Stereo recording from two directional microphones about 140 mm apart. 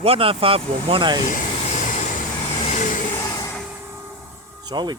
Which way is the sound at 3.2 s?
25° left (ahead or behind).